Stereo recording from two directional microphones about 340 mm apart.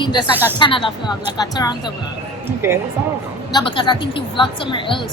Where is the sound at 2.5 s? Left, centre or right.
Centre.